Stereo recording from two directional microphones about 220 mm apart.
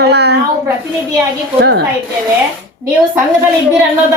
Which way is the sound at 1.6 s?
50° right (ahead or behind).